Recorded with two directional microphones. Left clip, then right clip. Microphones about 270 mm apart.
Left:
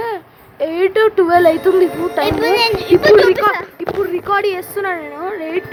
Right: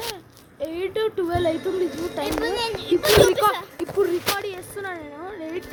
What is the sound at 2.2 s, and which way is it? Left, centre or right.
Speech, left.